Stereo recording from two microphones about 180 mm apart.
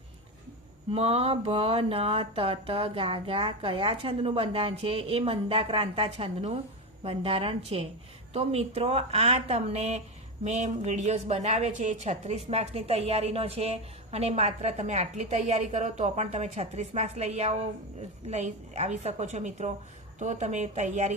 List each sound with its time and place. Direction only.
0.9 s speech: 35° right (ahead or behind)